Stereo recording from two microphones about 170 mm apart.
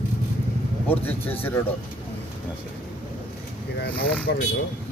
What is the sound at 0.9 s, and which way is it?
Speech, 10° left (ahead or behind).